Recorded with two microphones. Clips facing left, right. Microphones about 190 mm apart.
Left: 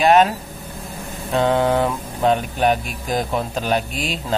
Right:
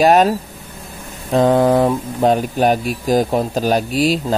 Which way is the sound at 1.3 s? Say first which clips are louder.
Right 5 dB; 35° right (ahead or behind).